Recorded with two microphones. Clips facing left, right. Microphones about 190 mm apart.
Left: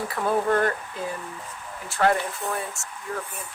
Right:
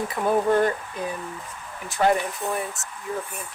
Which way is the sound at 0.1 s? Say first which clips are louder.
Right 2 dB; 15° right (ahead or behind).